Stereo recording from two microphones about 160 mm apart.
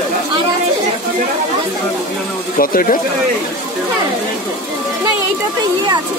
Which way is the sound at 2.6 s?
60° left (ahead or behind).